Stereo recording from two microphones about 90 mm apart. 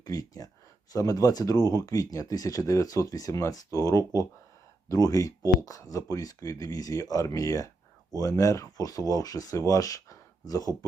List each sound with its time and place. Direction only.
0.0 s speech: 45° left (ahead or behind)